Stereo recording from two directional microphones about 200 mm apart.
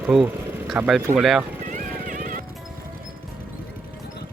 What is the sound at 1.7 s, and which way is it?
Music, 40° right (ahead or behind).